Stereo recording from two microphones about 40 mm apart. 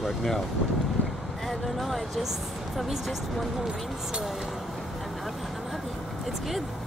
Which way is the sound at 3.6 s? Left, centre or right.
Centre.